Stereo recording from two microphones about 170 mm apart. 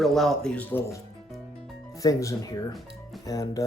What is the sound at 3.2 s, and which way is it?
Speech, 20° left (ahead or behind).